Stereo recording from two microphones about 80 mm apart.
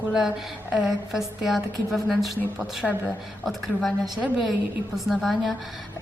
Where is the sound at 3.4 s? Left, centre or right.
Centre.